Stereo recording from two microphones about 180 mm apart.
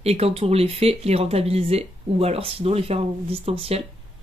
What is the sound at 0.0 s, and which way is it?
Speech, 35° right (ahead or behind).